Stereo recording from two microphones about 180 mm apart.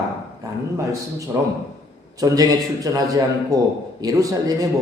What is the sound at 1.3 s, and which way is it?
A man's voice, 15° right (ahead or behind).